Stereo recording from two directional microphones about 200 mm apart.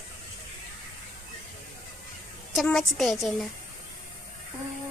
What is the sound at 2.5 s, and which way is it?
Speech, centre (ahead or behind).